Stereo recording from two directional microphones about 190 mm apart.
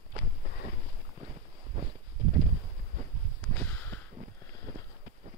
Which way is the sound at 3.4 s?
10° left (ahead or behind).